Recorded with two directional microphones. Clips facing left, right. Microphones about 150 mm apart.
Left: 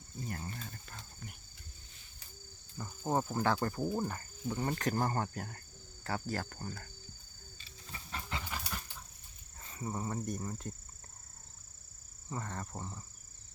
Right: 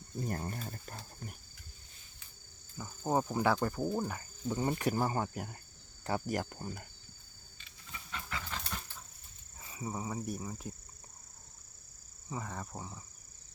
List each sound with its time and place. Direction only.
0.3 s speech: 40° right (ahead or behind)
3.0 s cricket: 10° right (ahead or behind)
3.3 s speech: 10° right (ahead or behind)
3.8 s insect: 5° left (ahead or behind)
4.1 s speech: 15° right (ahead or behind)
7.6 s a sound: 35° left (ahead or behind)
8.4 s a sound: 10° left (ahead or behind)
9.6 s speech: 10° right (ahead or behind)
12.3 s speech: 5° right (ahead or behind)